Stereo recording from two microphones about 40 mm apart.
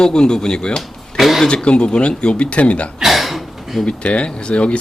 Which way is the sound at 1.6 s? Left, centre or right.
Left.